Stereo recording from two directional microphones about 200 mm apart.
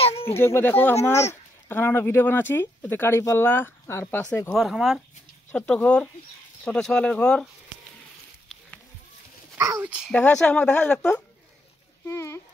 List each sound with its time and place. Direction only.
0.0 s a sound: 30° left (ahead or behind)
0.4 s speech: 10° left (ahead or behind)
4.6 s speech: centre (ahead or behind)
9.6 s speech: 15° right (ahead or behind)
10.1 s speech: 5° left (ahead or behind)
12.1 s a sound: 15° left (ahead or behind)